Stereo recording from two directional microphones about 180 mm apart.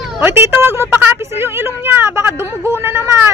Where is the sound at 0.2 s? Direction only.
10° right (ahead or behind).